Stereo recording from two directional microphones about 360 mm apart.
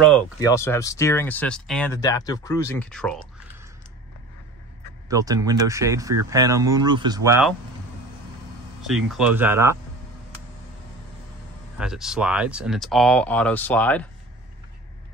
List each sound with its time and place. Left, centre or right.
0.4 s speech: centre
5.0 s speech: centre
8.8 s speech: centre
11.8 s speech: centre